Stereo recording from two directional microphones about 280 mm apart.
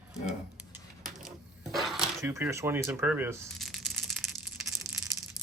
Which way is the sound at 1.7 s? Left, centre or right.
Centre.